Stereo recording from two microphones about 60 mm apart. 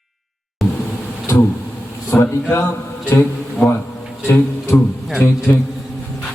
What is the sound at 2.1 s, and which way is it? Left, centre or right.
Speech, left.